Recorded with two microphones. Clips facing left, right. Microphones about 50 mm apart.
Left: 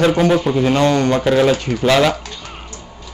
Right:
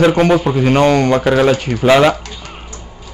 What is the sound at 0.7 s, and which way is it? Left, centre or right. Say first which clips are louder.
Speech: right 5 dB; right.